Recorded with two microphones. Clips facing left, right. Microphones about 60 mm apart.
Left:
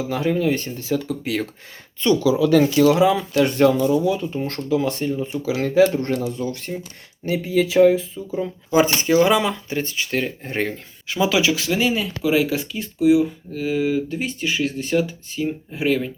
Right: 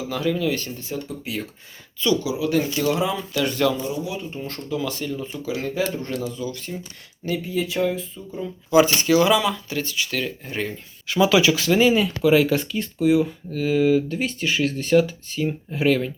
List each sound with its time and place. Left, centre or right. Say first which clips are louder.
0.1 s speech: left 2 dB; left
0.9 s speech: left 9 dB; left
2.0 s speech: left 5 dB; left
2.7 s speech: left 7 dB; left
3.3 s speech: left 3 dB; left
4.4 s speech: left 7 dB; left
4.8 s speech: left 5 dB; left
5.3 s speech: left 6 dB; left
7.4 s speech: left 10 dB; left
8.7 s speech: even; left
10.4 s speech: left 4 dB; left
11.1 s speech: right 2 dB; centre